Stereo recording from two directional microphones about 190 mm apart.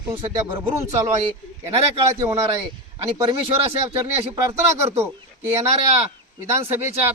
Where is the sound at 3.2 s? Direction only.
30° right (ahead or behind); by 5.5 s 15° right (ahead or behind).